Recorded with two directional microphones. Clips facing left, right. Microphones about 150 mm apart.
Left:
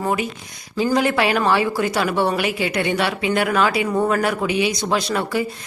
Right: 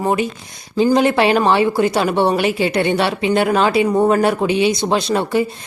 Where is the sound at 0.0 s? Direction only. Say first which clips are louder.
Right 4 dB; 25° right (ahead or behind).